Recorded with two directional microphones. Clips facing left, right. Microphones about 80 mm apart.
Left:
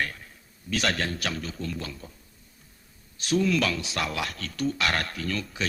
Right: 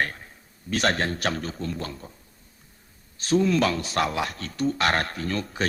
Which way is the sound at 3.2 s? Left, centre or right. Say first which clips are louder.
Right 3 dB; right.